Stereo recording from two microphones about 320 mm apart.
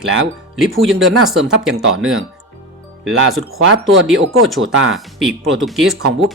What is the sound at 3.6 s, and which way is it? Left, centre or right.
Speech, right.